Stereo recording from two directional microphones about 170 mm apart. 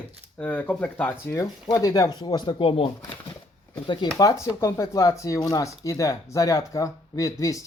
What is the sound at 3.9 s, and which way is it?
Speech, 25° left (ahead or behind).